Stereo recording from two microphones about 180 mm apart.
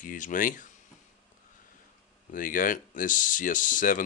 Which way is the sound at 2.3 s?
50° left (ahead or behind).